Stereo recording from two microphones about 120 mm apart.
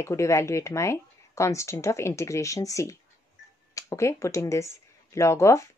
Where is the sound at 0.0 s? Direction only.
25° left (ahead or behind).